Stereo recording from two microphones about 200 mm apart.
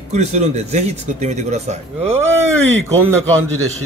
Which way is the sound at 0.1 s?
35° right (ahead or behind).